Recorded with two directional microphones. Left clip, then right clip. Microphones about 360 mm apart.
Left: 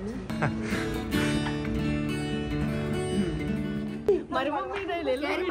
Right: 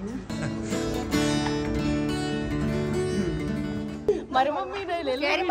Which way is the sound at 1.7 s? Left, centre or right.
Centre.